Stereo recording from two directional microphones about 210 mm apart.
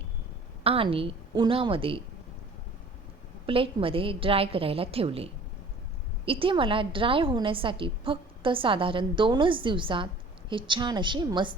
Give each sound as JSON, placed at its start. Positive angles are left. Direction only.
{"t": 0.6, "sound": "a woman's voice", "side_deg": -25}
{"t": 3.4, "sound": "a woman's voice", "side_deg": -25}